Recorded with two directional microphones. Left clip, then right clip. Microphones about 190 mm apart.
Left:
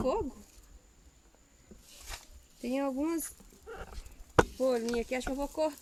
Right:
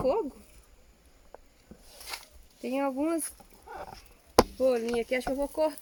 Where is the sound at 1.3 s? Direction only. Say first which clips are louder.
Right 19 dB; 40° right (ahead or behind).